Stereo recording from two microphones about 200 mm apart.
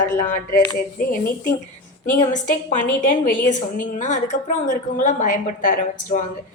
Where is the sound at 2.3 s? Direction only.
40° left (ahead or behind).